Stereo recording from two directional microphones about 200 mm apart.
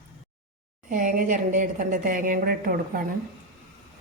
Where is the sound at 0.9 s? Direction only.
40° right (ahead or behind).